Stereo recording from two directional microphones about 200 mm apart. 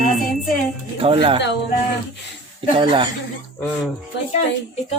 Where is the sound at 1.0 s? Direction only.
25° right (ahead or behind).